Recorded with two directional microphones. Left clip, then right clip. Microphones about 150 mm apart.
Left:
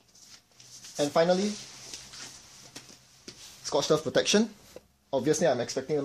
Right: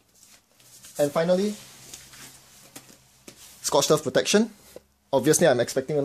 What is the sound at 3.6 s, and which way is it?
Speech, 50° right (ahead or behind).